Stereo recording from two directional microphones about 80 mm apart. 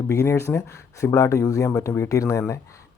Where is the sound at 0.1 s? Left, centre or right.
Left.